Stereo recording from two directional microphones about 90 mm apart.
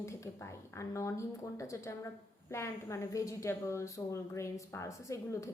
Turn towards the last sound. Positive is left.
turn(degrees=35)  # may be behind; listen again after turning